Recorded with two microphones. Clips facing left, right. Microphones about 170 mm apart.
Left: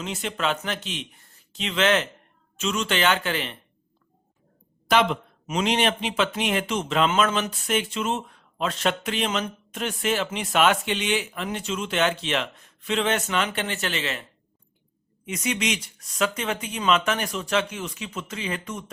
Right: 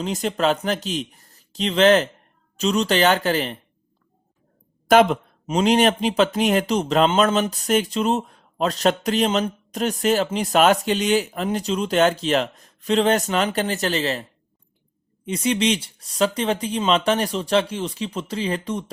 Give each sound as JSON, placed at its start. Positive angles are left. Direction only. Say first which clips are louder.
{"t": 0.0, "sound": "speech", "louder": "right 6 dB", "side_deg": -40}
{"t": 4.9, "sound": "speech", "louder": "right 6 dB", "side_deg": -45}
{"t": 5.5, "sound": "speech", "louder": "right 6 dB", "side_deg": -35}